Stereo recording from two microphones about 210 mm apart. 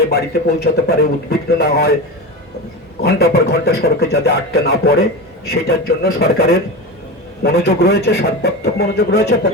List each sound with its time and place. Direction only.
0.0 s a man's voice: 50° left (ahead or behind)
3.0 s a man's voice: 50° left (ahead or behind)